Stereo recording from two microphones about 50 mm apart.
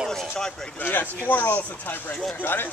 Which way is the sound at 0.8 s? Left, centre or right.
Left.